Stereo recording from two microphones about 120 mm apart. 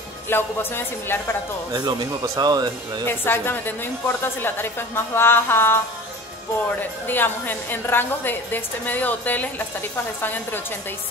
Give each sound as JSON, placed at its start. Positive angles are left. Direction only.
{"t": 0.3, "sound": "a woman's voice", "side_deg": 20}
{"t": 1.7, "sound": "speech", "side_deg": -35}
{"t": 3.1, "sound": "a woman's voice", "side_deg": 20}
{"t": 6.8, "sound": "a woman's voice", "side_deg": 15}